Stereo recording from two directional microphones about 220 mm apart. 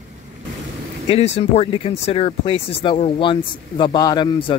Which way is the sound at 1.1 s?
25° left (ahead or behind).